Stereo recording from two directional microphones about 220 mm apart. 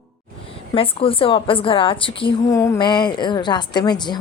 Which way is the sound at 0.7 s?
25° left (ahead or behind).